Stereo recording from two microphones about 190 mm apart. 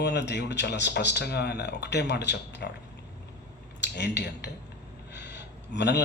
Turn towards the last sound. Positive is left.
turn(degrees=65)  # may be behind; listen again after turning